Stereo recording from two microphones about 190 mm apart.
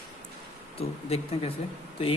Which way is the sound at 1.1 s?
30° left (ahead or behind).